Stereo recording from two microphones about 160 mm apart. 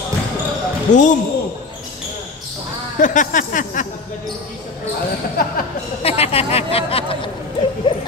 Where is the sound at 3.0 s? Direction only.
55° left (ahead or behind).